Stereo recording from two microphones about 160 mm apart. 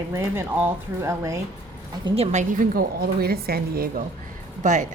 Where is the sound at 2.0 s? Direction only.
40° right (ahead or behind).